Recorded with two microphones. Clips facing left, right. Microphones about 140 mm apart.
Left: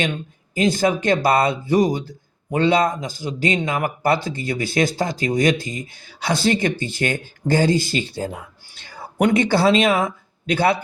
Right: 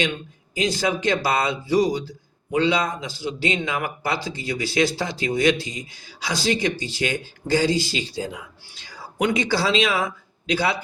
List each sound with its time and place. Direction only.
0.5 s speech: 50° left (ahead or behind)